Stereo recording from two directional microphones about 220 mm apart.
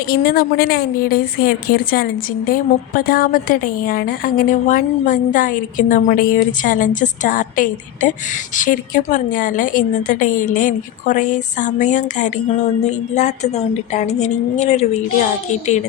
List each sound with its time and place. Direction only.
0.1 s a woman's voice: 45° left (ahead or behind)